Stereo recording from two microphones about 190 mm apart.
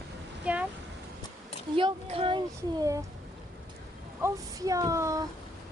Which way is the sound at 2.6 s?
15° right (ahead or behind).